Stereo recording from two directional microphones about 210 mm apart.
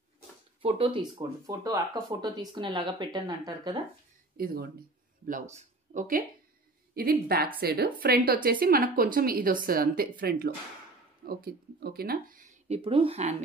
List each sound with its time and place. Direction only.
0.6 s speech: 25° right (ahead or behind)
4.4 s speech: 45° right (ahead or behind)